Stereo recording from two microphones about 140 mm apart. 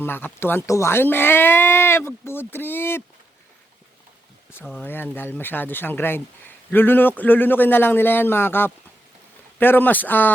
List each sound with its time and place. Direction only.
0.0 s speech: 15° left (ahead or behind)
4.8 s speech: 15° left (ahead or behind)